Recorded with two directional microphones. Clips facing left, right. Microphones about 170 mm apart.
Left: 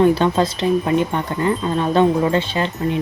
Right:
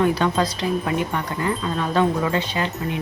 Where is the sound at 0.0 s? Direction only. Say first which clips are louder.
Left 5 dB; 25° left (ahead or behind).